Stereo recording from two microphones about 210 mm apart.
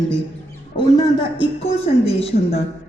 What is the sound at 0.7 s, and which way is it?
A woman's voice, 20° left (ahead or behind).